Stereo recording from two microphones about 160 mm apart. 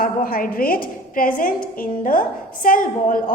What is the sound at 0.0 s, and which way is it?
A woman's voice, 65° left (ahead or behind).